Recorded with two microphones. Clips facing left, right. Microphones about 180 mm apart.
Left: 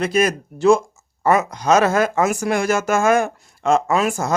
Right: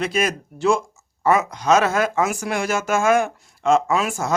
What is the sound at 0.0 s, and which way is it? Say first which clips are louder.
Speech: left 4 dB; 40° left (ahead or behind).